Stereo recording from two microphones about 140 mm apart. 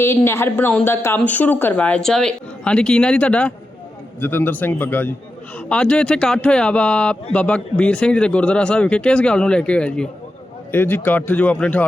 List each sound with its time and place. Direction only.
0.0 s speech: 15° left (ahead or behind)